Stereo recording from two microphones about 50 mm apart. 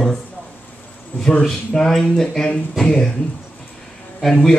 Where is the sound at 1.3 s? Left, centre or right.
Centre.